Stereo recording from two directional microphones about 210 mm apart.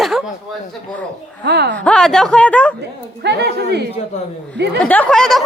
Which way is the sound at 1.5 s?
50° right (ahead or behind).